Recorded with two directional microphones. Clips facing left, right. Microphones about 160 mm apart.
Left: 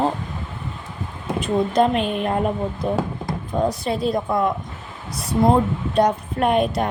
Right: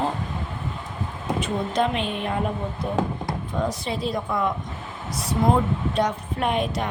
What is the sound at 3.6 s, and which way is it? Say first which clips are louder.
Speech: left 6 dB; 55° left (ahead or behind).